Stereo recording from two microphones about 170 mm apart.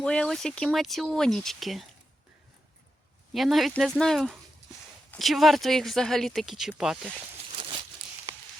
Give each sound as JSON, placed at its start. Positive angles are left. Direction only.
{"t": 0.0, "sound": "speech", "side_deg": 5}
{"t": 3.3, "sound": "speech", "side_deg": 0}
{"t": 7.5, "sound": "a sound", "side_deg": -30}